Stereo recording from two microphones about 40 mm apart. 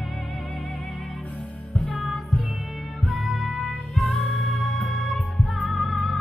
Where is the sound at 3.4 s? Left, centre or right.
Right.